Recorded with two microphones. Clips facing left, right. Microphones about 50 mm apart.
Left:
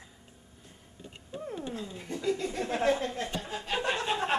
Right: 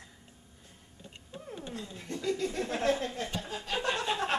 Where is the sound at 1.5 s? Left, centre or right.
Centre.